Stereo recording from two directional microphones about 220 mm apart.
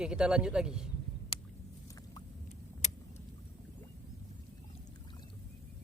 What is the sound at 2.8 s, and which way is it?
Vehicle, 35° left (ahead or behind).